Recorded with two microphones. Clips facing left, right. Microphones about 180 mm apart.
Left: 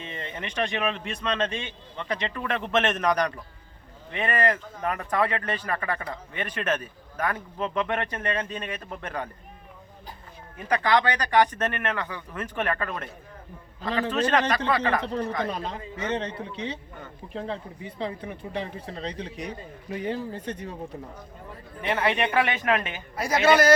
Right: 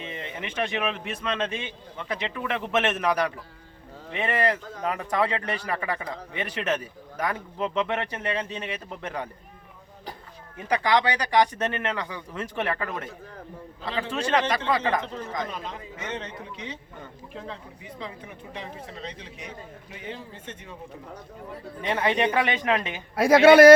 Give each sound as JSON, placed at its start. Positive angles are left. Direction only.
{"t": 0.0, "sound": "speech", "side_deg": -10}
{"t": 10.6, "sound": "speech", "side_deg": -15}
{"t": 14.1, "sound": "speech", "side_deg": -10}
{"t": 15.4, "sound": "speech", "side_deg": 35}
{"t": 21.8, "sound": "speech", "side_deg": -25}
{"t": 23.1, "sound": "speech", "side_deg": -60}